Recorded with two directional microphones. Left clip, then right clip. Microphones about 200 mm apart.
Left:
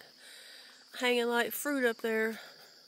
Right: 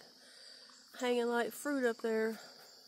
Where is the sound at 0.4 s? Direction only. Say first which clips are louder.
Left 4 dB; 15° left (ahead or behind).